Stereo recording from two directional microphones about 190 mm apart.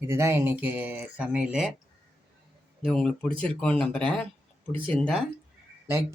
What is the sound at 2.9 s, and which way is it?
Speech, centre (ahead or behind).